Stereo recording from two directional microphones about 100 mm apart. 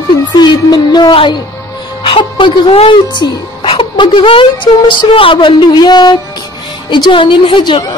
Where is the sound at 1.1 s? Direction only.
55° left (ahead or behind).